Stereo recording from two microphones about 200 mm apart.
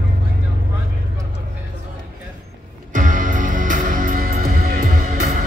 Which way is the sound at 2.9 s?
40° right (ahead or behind).